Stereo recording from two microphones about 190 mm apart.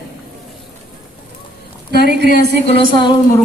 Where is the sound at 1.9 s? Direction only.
60° right (ahead or behind).